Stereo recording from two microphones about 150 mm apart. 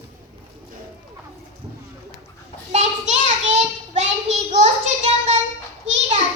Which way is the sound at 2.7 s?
50° right (ahead or behind).